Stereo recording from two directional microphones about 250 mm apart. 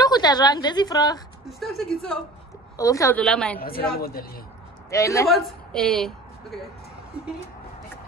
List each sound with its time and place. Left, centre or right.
0.0 s a woman's voice: centre
1.4 s a woman's voice: centre
3.6 s a woman's voice: left
4.9 s a woman's voice: centre